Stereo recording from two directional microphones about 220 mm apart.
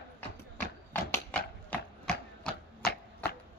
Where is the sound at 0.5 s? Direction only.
35° left (ahead or behind).